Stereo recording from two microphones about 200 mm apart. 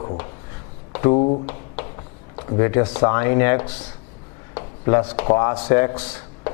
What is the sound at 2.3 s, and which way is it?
A man's voice, 20° left (ahead or behind).